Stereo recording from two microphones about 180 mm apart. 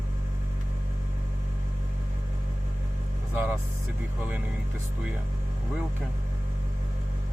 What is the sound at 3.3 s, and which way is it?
Vehicle, 10° right (ahead or behind).